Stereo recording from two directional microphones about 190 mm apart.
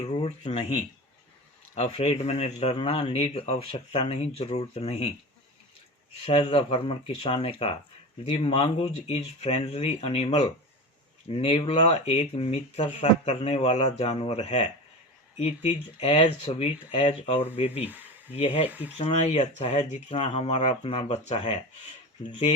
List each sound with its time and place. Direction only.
0.2 s speech: 35° left (ahead or behind)
1.7 s speech: 30° left (ahead or behind)
6.2 s speech: 25° left (ahead or behind)
18.7 s speech: 10° right (ahead or behind)
18.9 s speech: 35° left (ahead or behind)